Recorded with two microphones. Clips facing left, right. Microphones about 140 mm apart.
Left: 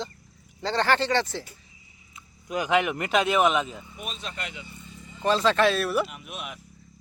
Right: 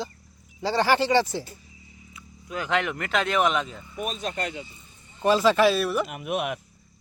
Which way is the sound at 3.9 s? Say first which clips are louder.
Right 11 dB; 40° right (ahead or behind).